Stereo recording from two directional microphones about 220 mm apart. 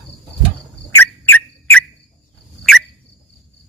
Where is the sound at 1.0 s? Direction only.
10° left (ahead or behind).